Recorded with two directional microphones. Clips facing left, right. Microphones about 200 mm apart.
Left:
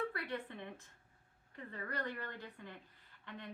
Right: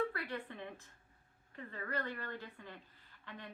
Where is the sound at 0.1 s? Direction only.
20° left (ahead or behind).